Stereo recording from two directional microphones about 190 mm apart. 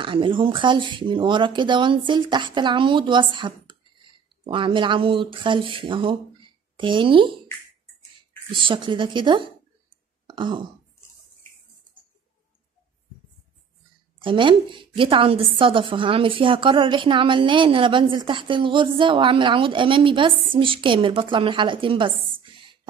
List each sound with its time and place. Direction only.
0.0 s a woman's voice: 25° right (ahead or behind)
8.5 s a woman's voice: 25° right (ahead or behind)
10.2 s throat clearing: 25° right (ahead or behind)
14.2 s a woman's voice: 25° right (ahead or behind)